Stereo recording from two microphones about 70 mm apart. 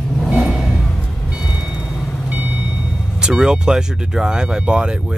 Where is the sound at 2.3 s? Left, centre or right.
Right.